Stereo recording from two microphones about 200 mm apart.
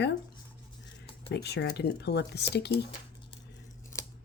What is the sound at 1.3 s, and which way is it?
Speech, 55° left (ahead or behind).